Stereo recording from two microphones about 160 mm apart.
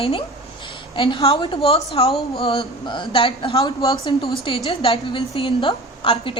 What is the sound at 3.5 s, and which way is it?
Speech, 20° left (ahead or behind).